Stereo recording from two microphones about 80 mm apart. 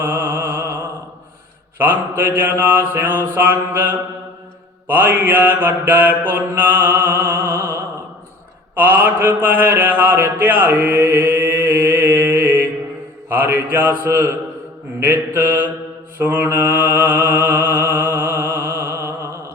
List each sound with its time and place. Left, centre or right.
0.0 s a sound: right
1.8 s mantra: right
8.7 s mantra: right